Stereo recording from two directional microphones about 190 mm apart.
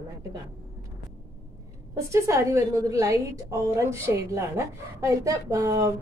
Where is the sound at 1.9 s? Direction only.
15° right (ahead or behind).